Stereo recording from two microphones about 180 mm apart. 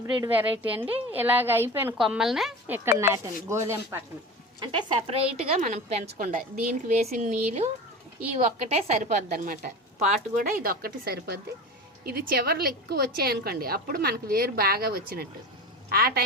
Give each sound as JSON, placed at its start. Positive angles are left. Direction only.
{"t": 0.0, "sound": "a woman's voice", "side_deg": -10}
{"t": 4.6, "sound": "a woman's voice", "side_deg": -30}
{"t": 8.7, "sound": "a woman's voice", "side_deg": -45}